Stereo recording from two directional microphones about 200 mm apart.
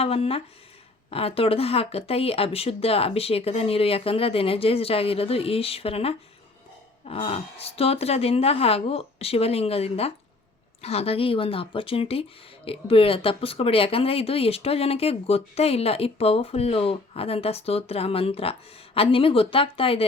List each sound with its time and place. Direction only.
0.0 s speech: 30° left (ahead or behind)